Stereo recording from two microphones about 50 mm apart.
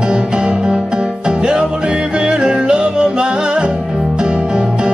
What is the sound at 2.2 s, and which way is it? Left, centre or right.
Music, centre.